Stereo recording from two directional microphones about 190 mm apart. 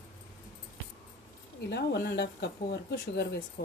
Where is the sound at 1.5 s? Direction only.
60° left (ahead or behind).